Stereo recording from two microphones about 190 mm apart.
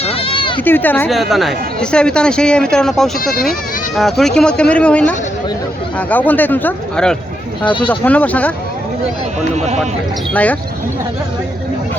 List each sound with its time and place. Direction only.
0.0 s sheep: 30° left (ahead or behind)
0.6 s speech: 10° left (ahead or behind)
7.6 s speech: 25° left (ahead or behind)
7.9 s speech: 10° left (ahead or behind)
10.3 s speech: 10° left (ahead or behind)